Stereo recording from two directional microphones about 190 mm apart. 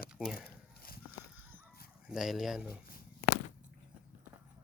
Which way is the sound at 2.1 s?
Centre (ahead or behind).